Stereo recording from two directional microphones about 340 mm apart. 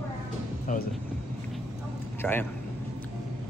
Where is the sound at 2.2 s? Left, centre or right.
Centre.